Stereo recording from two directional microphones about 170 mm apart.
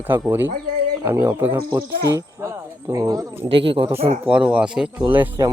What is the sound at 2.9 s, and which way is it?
Speech, 20° right (ahead or behind).